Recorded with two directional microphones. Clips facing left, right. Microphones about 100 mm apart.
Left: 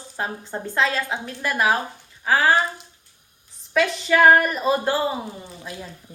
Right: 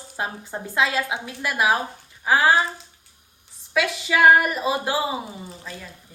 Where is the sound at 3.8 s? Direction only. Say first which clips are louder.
Left 2 dB; 5° right (ahead or behind).